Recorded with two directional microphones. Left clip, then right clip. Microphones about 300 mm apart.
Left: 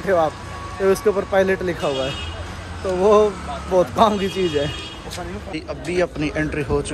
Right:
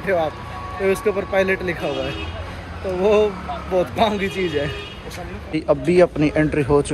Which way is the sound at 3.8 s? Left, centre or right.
Centre.